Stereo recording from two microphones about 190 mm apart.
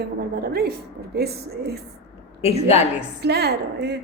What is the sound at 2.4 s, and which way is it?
Speech, 35° left (ahead or behind).